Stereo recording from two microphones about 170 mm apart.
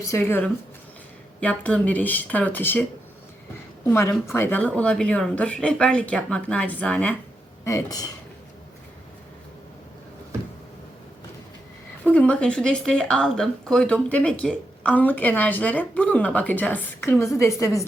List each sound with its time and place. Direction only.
0.0 s speech: 15° left (ahead or behind)
3.8 s speech: 15° left (ahead or behind)
12.0 s speech: 5° left (ahead or behind)